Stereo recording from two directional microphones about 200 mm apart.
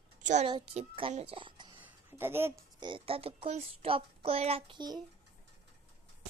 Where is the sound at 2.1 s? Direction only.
10° right (ahead or behind).